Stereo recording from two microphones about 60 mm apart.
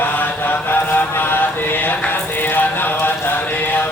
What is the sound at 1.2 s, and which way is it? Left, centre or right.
Mantra, left.